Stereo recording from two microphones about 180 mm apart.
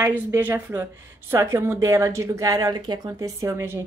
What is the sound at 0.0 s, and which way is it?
A woman's voice, 10° right (ahead or behind).